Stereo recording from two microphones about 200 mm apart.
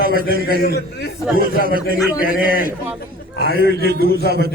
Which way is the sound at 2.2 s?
45° left (ahead or behind).